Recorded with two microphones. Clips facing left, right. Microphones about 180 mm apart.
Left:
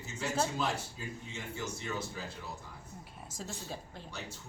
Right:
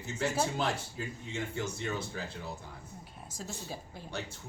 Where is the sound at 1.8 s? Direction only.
65° right (ahead or behind).